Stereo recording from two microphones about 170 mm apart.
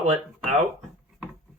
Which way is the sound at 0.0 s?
45° right (ahead or behind).